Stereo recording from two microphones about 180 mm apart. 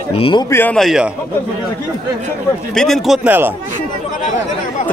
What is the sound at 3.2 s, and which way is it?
Speech, 10° right (ahead or behind).